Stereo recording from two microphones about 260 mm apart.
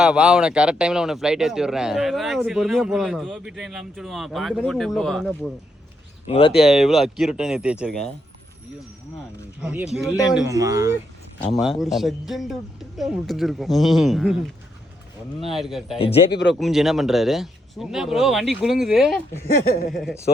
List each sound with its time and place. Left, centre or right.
0.0 s a man's voice: centre
6.2 s speech: left
6.5 s a man's voice: centre
9.6 s a man's voice: centre
10.4 s speech: centre
11.6 s a man's voice: centre
16.0 s speech: left
16.3 s speech: left
16.6 s a man's voice: centre